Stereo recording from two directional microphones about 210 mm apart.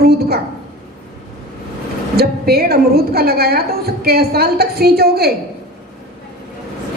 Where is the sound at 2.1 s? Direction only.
45° right (ahead or behind).